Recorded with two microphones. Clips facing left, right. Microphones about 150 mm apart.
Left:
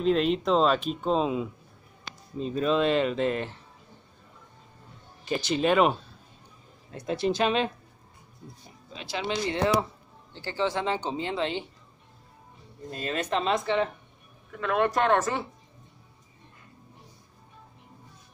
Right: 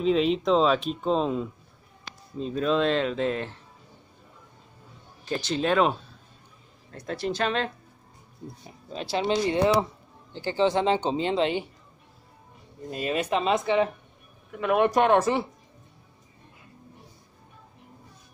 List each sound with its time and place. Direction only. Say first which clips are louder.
0.0 s speech: right 1 dB; centre (ahead or behind)
5.2 s speech: left 1 dB; 5° left (ahead or behind)
6.9 s speech: left 3 dB; 15° left (ahead or behind)
8.9 s speech: right 6 dB; 30° right (ahead or behind)
10.3 s speech: right 5 dB; 20° right (ahead or behind)
12.9 s speech: right 3 dB; 10° right (ahead or behind)